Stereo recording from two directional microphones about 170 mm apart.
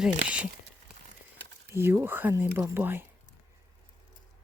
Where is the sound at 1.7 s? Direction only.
15° right (ahead or behind).